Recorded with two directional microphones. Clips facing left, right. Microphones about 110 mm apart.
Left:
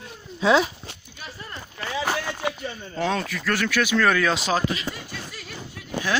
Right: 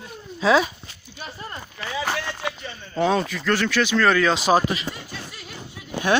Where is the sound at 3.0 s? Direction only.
5° right (ahead or behind).